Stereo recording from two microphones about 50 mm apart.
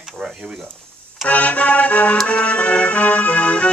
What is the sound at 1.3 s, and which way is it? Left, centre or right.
Music, left.